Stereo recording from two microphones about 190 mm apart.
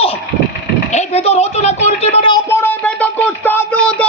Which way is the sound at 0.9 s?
35° left (ahead or behind).